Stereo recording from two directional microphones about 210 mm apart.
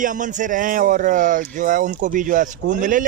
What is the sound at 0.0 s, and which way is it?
Speech, 35° right (ahead or behind).